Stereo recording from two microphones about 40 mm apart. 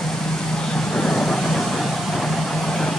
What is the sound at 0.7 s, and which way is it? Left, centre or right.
Vehicle, centre.